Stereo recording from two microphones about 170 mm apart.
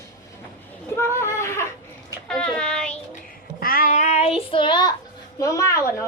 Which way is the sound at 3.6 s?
60° left (ahead or behind).